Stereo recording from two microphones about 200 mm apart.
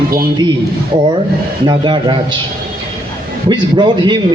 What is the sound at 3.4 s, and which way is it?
Speech, 25° right (ahead or behind).